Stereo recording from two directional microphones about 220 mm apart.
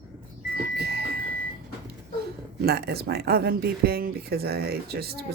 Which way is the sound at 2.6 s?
45° right (ahead or behind).